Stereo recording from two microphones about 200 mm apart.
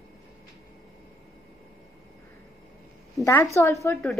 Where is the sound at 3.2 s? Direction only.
15° left (ahead or behind).